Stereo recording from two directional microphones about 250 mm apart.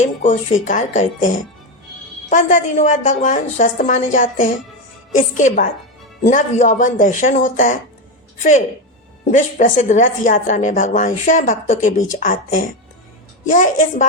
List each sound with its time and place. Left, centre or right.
0.0 s a woman's voice: left
2.3 s a woman's voice: left